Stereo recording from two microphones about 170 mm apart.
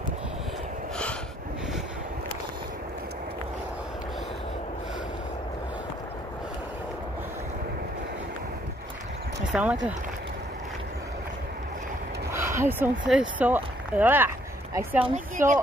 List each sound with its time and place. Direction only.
9.5 s speech: 10° right (ahead or behind)
12.3 s a sound: 15° right (ahead or behind)
13.1 s speech: 5° right (ahead or behind)
15.3 s speech: 50° right (ahead or behind)